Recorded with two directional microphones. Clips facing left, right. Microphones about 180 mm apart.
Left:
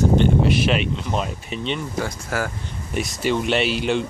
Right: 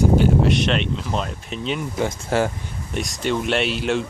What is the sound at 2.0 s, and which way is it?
Speech, 25° right (ahead or behind).